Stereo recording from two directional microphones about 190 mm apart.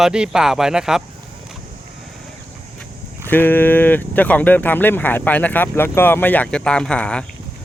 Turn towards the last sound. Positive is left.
turn(degrees=5)  # may be behind; listen again after turning